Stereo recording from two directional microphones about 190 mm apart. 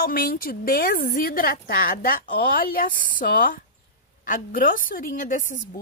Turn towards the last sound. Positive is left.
turn(degrees=45)  # may be behind; listen again after turning